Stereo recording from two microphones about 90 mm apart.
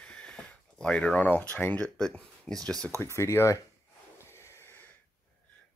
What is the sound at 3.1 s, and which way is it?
Speech, 30° left (ahead or behind).